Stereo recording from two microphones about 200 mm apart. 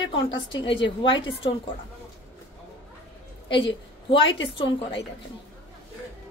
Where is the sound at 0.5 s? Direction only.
25° left (ahead or behind).